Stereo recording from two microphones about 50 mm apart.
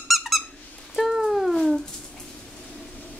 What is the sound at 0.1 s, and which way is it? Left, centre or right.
Squeak, centre.